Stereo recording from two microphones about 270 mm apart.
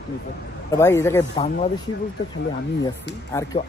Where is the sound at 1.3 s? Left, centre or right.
Left.